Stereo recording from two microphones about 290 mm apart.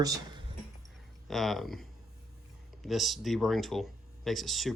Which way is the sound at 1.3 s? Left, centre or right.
Centre.